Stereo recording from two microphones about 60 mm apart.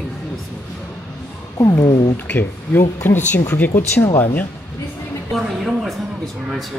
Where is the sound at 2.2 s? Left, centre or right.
Left.